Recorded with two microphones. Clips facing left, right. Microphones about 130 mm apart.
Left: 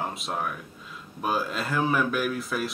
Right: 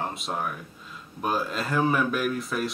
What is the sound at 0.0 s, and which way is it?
Speech, centre (ahead or behind).